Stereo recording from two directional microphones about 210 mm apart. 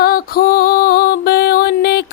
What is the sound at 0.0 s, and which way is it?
Music, 45° left (ahead or behind).